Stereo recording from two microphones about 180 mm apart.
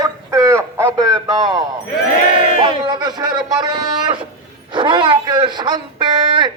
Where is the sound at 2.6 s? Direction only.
25° right (ahead or behind).